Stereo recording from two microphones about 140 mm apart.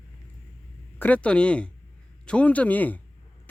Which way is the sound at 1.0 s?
10° left (ahead or behind).